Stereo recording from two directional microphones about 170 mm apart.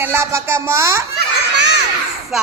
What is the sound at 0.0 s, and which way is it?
A woman's voice, 15° right (ahead or behind).